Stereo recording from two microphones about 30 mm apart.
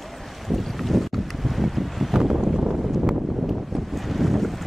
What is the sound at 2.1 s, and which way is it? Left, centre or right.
Boat, centre.